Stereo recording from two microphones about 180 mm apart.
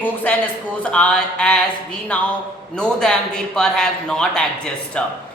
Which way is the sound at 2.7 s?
5° left (ahead or behind).